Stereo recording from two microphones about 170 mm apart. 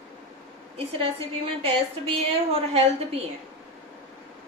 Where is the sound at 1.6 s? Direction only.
35° right (ahead or behind).